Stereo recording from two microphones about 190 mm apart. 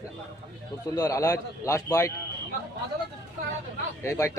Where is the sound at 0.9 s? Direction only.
20° left (ahead or behind).